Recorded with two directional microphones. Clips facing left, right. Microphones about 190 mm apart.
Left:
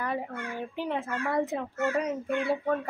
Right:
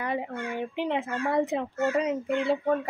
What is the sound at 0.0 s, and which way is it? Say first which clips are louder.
A child's voice: right 2 dB; 20° right (ahead or behind).